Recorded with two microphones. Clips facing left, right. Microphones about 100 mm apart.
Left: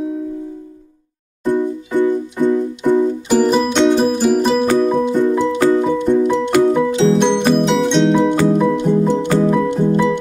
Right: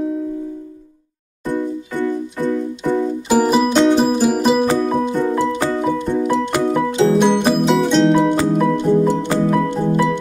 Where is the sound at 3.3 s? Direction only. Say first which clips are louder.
Right 2 dB; 10° right (ahead or behind).